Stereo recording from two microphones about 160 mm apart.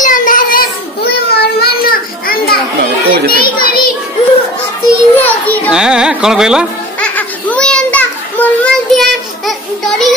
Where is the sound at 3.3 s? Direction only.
65° left (ahead or behind).